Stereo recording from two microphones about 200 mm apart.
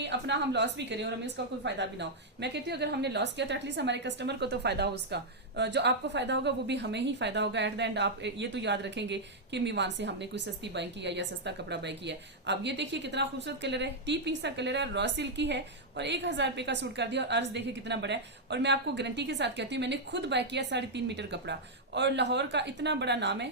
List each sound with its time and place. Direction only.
0.0 s a woman's voice: 60° right (ahead or behind)